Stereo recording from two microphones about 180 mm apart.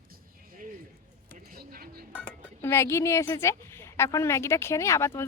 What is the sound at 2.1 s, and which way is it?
A woman's voice, 15° left (ahead or behind).